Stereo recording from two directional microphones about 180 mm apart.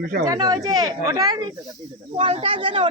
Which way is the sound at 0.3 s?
20° right (ahead or behind).